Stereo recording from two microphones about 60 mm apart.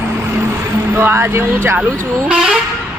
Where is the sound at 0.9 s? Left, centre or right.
Right.